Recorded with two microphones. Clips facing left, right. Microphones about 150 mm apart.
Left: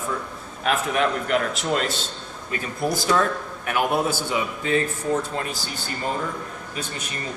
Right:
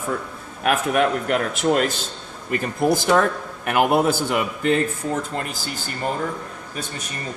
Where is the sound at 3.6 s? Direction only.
60° right (ahead or behind).